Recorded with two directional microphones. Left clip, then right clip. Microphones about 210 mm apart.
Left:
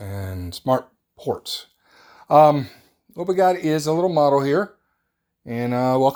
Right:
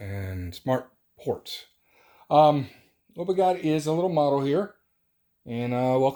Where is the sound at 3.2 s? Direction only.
30° left (ahead or behind).